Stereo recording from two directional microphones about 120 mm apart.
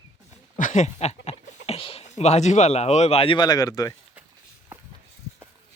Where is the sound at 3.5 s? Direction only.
30° left (ahead or behind).